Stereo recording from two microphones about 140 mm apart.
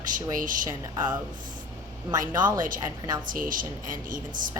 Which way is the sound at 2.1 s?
30° right (ahead or behind).